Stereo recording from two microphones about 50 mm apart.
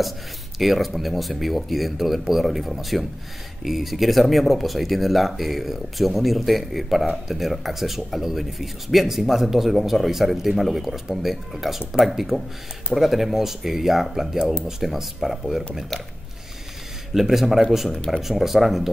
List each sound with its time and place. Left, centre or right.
0.6 s speech: centre
17.1 s speech: centre
17.9 s speech: centre
18.2 s speech: centre